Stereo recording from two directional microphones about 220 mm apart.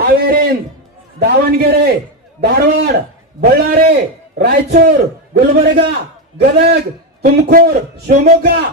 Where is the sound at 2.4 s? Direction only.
45° right (ahead or behind).